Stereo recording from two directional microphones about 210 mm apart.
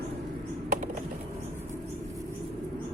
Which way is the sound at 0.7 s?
35° right (ahead or behind).